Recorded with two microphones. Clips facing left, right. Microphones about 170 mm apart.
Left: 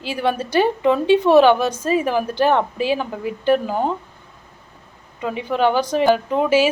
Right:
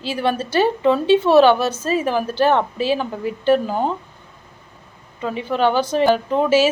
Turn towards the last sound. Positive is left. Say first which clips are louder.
# right 1 dB
turn(degrees=10)  # may be behind; listen again after turning